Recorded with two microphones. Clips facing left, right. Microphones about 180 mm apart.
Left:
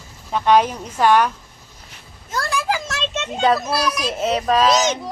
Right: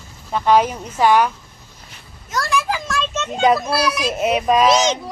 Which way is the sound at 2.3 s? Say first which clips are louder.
Right 1 dB; 25° left (ahead or behind).